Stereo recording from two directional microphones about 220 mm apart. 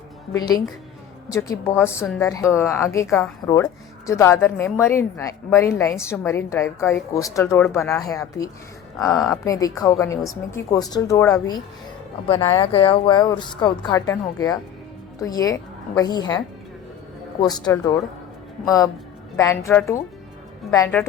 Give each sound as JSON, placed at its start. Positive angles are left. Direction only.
{"t": 0.3, "sound": "a woman's voice", "side_deg": 15}
{"t": 17.4, "sound": "a woman's voice", "side_deg": 20}